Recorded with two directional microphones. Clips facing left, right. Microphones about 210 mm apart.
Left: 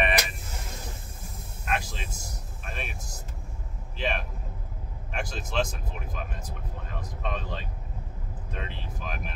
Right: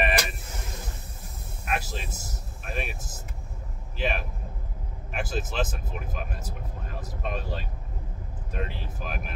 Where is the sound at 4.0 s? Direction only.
5° right (ahead or behind).